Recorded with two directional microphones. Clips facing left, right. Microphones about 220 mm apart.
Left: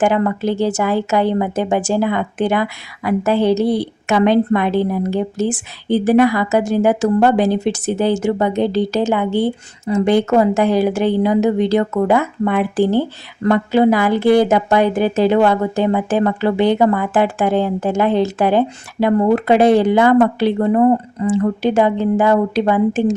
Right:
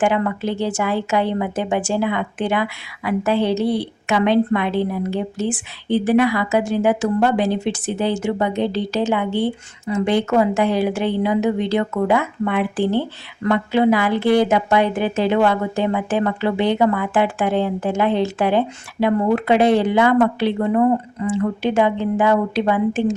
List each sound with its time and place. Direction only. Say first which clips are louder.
0.0 s a woman's voice: left 3 dB; 40° left (ahead or behind)